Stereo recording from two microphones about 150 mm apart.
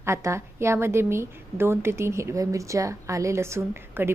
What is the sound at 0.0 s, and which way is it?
A woman's voice, 20° right (ahead or behind).